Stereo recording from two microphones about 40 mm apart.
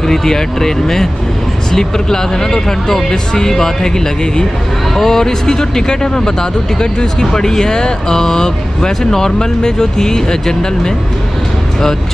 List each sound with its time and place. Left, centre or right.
0.0 s speech: centre
4.9 s speech: centre